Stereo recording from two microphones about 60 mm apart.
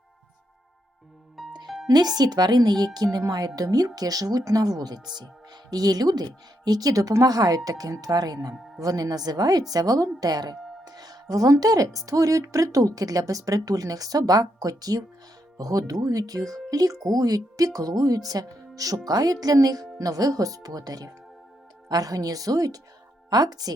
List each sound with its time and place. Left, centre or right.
1.4 s music: centre
2.0 s speech: right